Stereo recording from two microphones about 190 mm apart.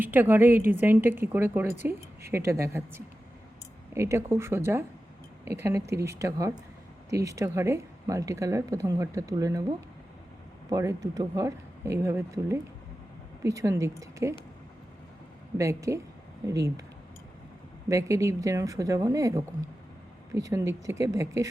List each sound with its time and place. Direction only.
0.0 s a woman's voice: 10° right (ahead or behind)
10.7 s a woman's voice: 15° right (ahead or behind)
15.5 s a woman's voice: 15° right (ahead or behind)
17.8 s a woman's voice: 15° right (ahead or behind)